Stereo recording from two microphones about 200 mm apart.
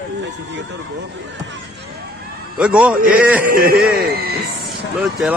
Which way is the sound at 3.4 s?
45° right (ahead or behind).